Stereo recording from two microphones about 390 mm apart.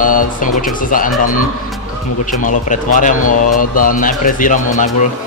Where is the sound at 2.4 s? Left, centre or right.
Centre.